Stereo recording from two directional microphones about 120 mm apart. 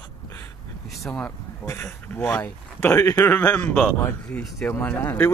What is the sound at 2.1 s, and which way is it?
Speech, 15° left (ahead or behind).